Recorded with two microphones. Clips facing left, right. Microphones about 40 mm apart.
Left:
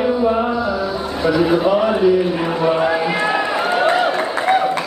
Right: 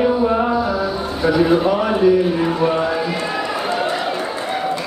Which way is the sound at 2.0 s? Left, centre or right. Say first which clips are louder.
Right 1 dB; centre.